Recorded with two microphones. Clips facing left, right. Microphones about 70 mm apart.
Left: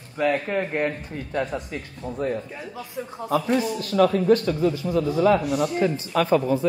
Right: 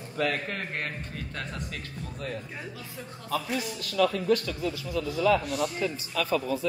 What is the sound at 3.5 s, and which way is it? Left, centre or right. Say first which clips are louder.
A man's voice: left 6 dB; left.